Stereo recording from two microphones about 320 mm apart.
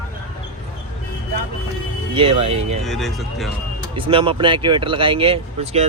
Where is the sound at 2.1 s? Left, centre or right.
Centre.